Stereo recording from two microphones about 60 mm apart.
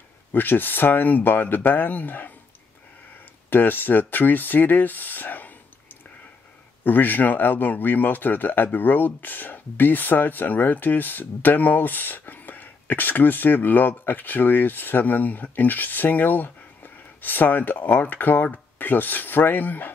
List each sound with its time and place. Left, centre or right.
0.3 s speech: left
3.4 s speech: left
6.8 s speech: left